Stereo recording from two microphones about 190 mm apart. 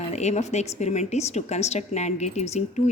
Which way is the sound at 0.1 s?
35° left (ahead or behind).